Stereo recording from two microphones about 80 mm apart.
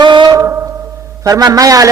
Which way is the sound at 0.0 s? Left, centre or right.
Right.